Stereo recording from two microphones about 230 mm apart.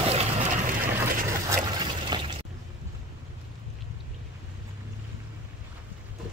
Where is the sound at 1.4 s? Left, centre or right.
Centre.